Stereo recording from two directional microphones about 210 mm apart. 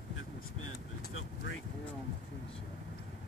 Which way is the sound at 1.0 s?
65° left (ahead or behind).